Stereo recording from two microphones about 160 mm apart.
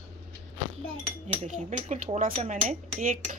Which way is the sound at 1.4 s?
50° right (ahead or behind).